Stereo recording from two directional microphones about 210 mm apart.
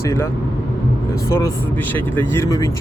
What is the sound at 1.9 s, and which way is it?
Speech, 10° left (ahead or behind).